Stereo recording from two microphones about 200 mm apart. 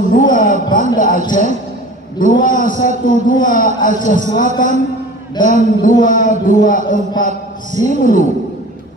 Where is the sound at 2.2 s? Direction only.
40° left (ahead or behind).